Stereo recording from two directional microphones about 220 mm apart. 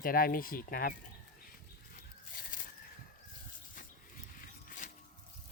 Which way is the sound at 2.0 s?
40° left (ahead or behind).